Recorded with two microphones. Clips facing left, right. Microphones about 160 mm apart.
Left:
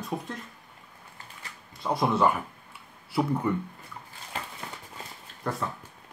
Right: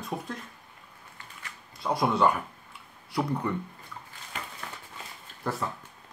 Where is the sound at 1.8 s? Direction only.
Centre (ahead or behind).